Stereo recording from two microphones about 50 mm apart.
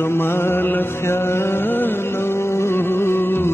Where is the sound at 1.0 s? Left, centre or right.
Left.